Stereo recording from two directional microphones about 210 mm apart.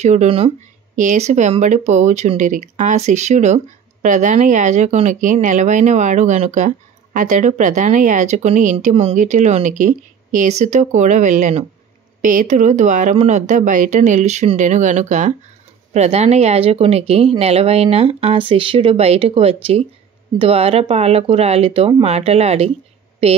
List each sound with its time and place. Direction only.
0.0 s a woman's voice: 30° right (ahead or behind)